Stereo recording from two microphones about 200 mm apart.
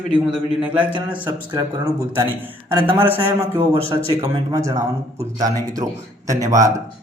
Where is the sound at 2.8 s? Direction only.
10° right (ahead or behind).